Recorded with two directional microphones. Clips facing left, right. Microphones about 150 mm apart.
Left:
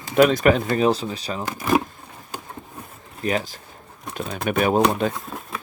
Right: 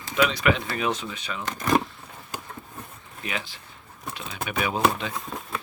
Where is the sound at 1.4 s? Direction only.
10° left (ahead or behind).